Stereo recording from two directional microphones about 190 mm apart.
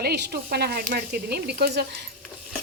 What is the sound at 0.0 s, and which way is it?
Speech, 55° right (ahead or behind).